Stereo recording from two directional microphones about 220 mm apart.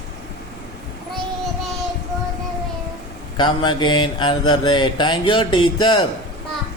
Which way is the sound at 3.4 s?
20° left (ahead or behind).